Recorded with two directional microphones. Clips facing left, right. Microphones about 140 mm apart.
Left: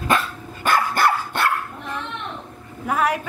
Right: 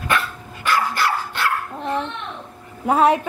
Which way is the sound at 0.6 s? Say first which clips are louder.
Left 2 dB; 50° left (ahead or behind).